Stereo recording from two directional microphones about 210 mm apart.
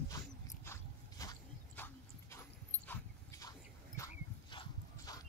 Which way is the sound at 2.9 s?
15° left (ahead or behind).